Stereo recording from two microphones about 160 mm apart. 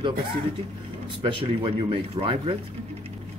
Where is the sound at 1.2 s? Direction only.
35° right (ahead or behind).